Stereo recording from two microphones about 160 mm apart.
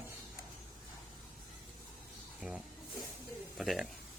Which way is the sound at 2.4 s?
5° right (ahead or behind).